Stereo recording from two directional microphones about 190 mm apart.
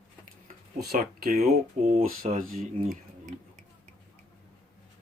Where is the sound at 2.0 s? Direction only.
45° right (ahead or behind).